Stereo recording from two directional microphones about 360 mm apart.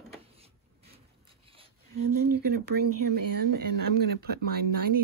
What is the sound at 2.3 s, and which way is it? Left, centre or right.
Speech, right.